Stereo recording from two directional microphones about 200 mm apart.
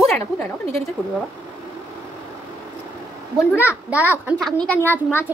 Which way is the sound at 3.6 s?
5° right (ahead or behind).